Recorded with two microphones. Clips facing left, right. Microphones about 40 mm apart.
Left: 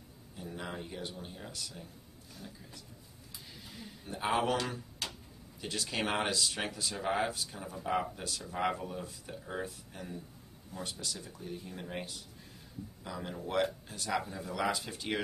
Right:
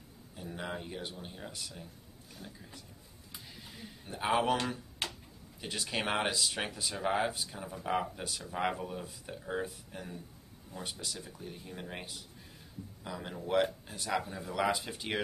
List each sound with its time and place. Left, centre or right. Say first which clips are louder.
0.4 s speech: right 1 dB; centre
3.7 s a sound: left 2 dB; centre
5.0 s tick-tock: right 3 dB; right
5.6 s speech: even; centre